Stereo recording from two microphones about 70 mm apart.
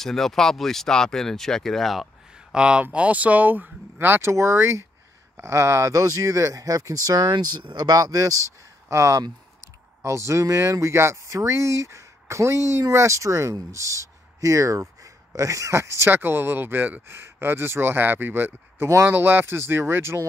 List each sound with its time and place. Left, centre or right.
0.0 s speech: centre
2.5 s speech: centre; by 8.4 s right
8.8 s speech: right